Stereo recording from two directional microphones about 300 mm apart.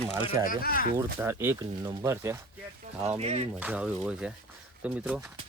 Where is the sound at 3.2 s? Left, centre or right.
Right.